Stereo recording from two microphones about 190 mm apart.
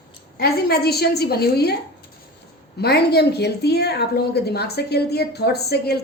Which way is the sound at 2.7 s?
60° left (ahead or behind).